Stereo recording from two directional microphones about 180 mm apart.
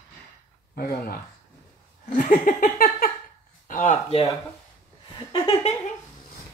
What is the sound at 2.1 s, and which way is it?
Laughter, 50° left (ahead or behind).